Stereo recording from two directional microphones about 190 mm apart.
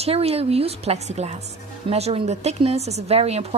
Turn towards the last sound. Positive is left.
turn(degrees=-35)  # may be behind; listen again after turning